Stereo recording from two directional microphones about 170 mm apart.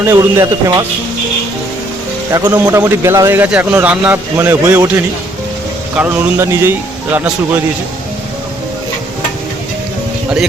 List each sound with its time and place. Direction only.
0.0 s a man's voice: 15° right (ahead or behind)
2.3 s a man's voice: 20° right (ahead or behind)
6.0 s a man's voice: 15° right (ahead or behind)